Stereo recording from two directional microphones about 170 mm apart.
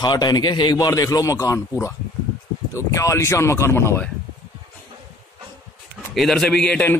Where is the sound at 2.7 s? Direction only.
15° left (ahead or behind).